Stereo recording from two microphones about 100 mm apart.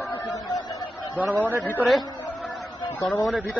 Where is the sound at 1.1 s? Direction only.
15° right (ahead or behind).